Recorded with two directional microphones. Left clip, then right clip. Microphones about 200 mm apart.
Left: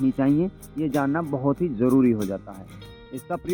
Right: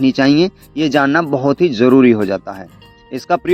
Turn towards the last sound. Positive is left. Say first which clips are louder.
# right 14 dB
turn(degrees=-50)  # may be behind; listen again after turning